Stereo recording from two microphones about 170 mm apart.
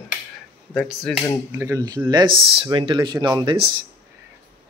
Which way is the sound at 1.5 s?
20° right (ahead or behind).